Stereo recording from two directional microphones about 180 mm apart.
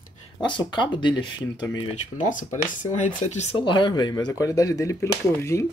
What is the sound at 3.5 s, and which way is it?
Speech, 25° left (ahead or behind).